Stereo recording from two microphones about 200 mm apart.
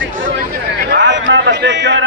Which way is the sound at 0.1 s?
45° right (ahead or behind).